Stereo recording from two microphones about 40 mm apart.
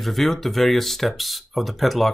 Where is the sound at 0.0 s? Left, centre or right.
Centre.